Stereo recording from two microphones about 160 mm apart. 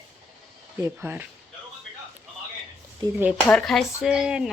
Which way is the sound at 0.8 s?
10° right (ahead or behind).